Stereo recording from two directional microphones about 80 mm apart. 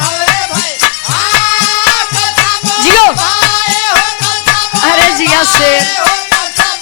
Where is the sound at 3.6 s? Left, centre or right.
Centre.